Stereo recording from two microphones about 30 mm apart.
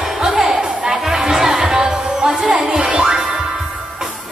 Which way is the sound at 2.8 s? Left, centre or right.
Right.